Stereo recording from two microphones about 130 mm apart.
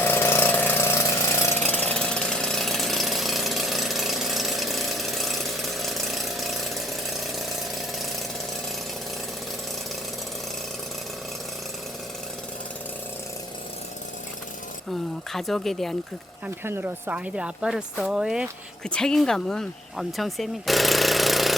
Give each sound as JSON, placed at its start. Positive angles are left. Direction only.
{"t": 0.0, "sound": "engine", "side_deg": 15}
{"t": 1.5, "sound": "ratchet", "side_deg": 15}
{"t": 15.3, "sound": "speech", "side_deg": 0}
{"t": 16.6, "sound": "speech", "side_deg": -15}
{"t": 18.9, "sound": "speech", "side_deg": 5}